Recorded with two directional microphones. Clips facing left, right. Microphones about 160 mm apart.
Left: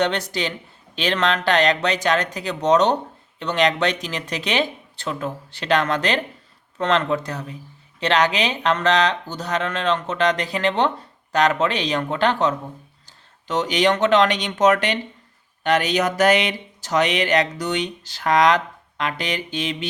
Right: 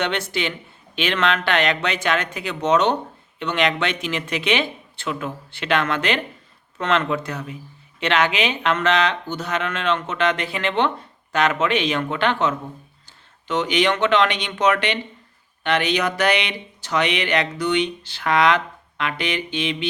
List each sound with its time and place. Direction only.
0.0 s speech: 35° left (ahead or behind)